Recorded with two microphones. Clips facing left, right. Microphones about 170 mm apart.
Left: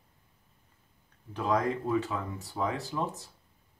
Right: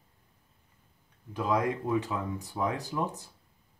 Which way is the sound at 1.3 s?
10° right (ahead or behind).